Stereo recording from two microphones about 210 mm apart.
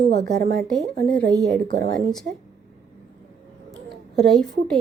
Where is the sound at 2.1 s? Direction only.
Centre (ahead or behind).